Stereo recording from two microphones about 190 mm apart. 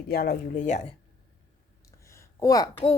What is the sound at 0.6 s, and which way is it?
Speech, 35° left (ahead or behind).